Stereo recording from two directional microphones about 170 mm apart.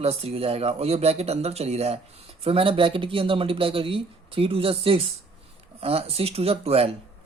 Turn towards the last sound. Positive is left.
turn(degrees=-35)  # may be behind; listen again after turning